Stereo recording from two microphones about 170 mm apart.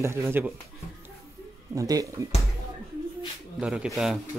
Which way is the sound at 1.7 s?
20° right (ahead or behind).